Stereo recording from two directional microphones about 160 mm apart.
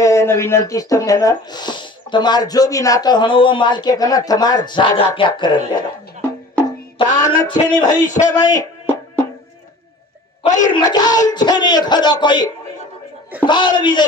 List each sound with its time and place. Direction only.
0.0 s speech: 15° left (ahead or behind)
6.6 s music: 25° left (ahead or behind)
8.4 s speech: 25° left (ahead or behind)
8.8 s music: 15° left (ahead or behind)
10.4 s speech: 50° left (ahead or behind)
10.7 s speech: 25° left (ahead or behind)
13.5 s speech: 30° left (ahead or behind)